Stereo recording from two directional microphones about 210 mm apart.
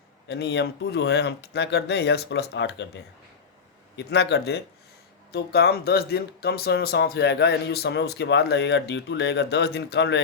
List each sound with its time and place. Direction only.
0.3 s speech: 55° left (ahead or behind)